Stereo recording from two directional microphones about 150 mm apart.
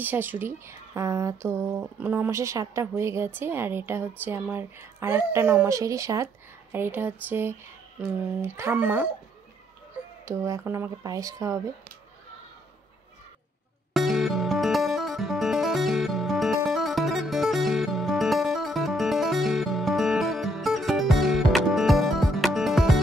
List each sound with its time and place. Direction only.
0.0 s speech: 10° right (ahead or behind)
10.2 s speech: 20° right (ahead or behind)
13.9 s music: centre (ahead or behind)